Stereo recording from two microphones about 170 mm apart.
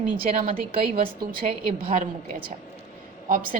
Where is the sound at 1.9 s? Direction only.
55° right (ahead or behind).